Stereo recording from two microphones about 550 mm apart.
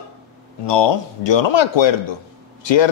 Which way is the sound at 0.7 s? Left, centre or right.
Left.